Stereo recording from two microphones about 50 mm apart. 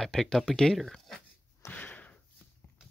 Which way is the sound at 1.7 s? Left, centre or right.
Left.